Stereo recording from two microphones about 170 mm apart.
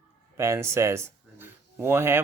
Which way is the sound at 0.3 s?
15° right (ahead or behind).